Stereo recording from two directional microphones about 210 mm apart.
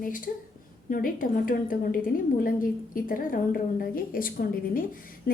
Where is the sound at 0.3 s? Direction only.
40° left (ahead or behind).